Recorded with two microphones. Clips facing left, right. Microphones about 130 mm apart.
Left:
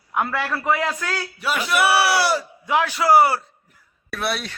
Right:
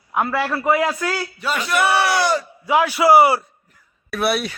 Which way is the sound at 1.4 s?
5° left (ahead or behind).